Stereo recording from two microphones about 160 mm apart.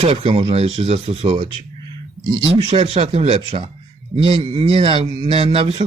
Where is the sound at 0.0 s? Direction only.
35° right (ahead or behind).